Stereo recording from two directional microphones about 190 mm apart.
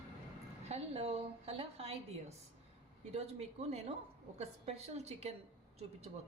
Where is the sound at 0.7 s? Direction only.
35° right (ahead or behind).